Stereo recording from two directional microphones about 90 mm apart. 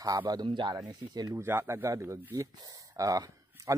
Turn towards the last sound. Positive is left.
turn(degrees=-40)  # may be behind; listen again after turning